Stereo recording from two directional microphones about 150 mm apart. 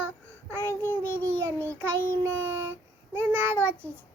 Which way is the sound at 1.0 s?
15° right (ahead or behind).